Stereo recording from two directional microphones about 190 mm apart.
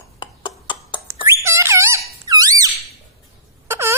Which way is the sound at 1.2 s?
15° right (ahead or behind).